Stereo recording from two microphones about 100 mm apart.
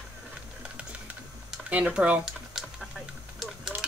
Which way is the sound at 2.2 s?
Centre (ahead or behind).